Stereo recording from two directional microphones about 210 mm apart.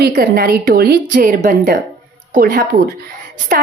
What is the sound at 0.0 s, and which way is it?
A woman's voice, 50° right (ahead or behind).